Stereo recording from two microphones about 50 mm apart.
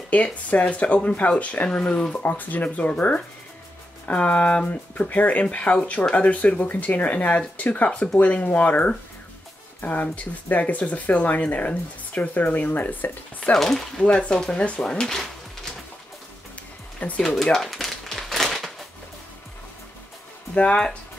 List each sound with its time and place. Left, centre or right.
0.1 s speech: left
4.6 s speech: left
13.6 s speech: centre
17.2 s a sound: centre
20.5 s speech: left